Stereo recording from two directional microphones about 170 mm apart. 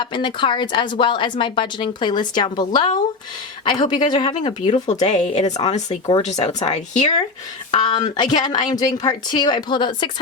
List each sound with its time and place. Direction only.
0.0 s a woman's voice: 30° left (ahead or behind)
7.7 s a woman's voice: 30° left (ahead or behind)